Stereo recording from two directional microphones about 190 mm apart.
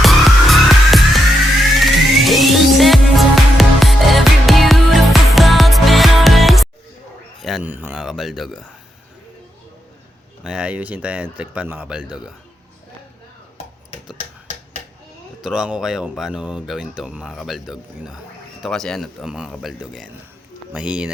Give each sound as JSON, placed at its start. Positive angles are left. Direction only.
{"t": 0.0, "sound": "music", "side_deg": 0}
{"t": 7.4, "sound": "speech", "side_deg": -5}
{"t": 10.4, "sound": "speech", "side_deg": -5}
{"t": 15.4, "sound": "speech", "side_deg": -5}